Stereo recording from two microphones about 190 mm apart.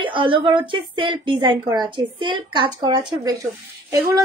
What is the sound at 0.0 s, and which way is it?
A woman's voice, 25° right (ahead or behind).